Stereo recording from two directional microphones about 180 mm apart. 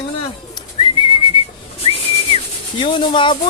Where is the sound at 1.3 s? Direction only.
30° left (ahead or behind).